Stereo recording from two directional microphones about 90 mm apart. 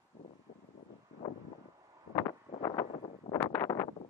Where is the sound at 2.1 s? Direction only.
40° left (ahead or behind).